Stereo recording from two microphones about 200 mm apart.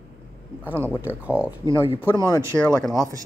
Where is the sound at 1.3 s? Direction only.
5° right (ahead or behind).